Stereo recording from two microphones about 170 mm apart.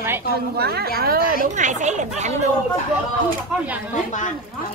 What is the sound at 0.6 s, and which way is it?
Speech, 70° right (ahead or behind).